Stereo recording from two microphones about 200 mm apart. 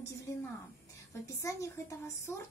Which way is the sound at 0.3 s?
15° left (ahead or behind).